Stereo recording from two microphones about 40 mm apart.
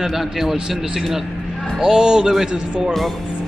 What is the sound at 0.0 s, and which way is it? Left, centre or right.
A man's voice, centre.